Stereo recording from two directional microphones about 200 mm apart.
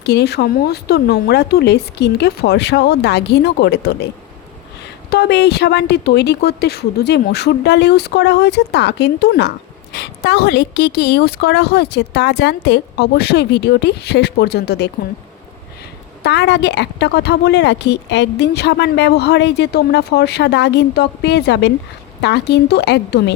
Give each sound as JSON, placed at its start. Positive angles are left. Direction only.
{"t": 0.0, "sound": "a woman's voice", "side_deg": 55}
{"t": 5.1, "sound": "a woman's voice", "side_deg": 55}
{"t": 16.2, "sound": "a woman's voice", "side_deg": 60}